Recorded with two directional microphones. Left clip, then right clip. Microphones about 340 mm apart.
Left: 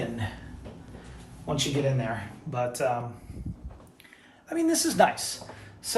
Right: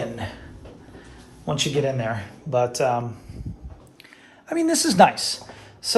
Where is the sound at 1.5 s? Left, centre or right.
Centre.